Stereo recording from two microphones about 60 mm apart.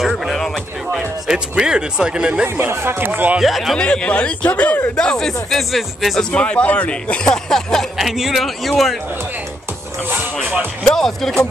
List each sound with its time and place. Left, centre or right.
0.9 s speech: centre
2.4 s speech: right
3.1 s speech: right
3.3 s a man's voice: centre
3.7 s a man's voice: centre
4.9 s speech: centre
6.3 s a man's voice: left
7.2 s speech: centre
8.0 s a man's voice: centre
10.1 s speech: right
10.8 s speech: centre